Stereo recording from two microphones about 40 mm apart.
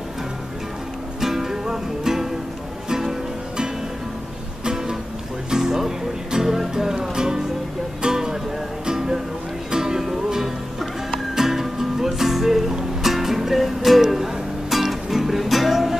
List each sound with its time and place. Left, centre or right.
1.2 s music: centre